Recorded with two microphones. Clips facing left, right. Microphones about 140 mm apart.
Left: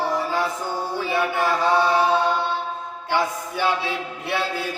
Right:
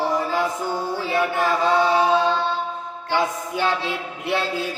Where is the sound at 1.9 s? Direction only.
20° right (ahead or behind).